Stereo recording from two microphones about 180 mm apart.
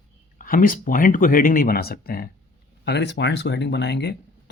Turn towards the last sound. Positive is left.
turn(degrees=70)  # may be behind; listen again after turning